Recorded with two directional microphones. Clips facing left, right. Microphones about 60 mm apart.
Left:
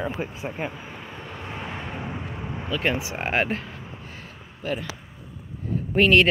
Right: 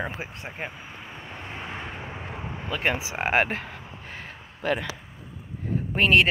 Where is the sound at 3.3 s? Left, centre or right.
Right.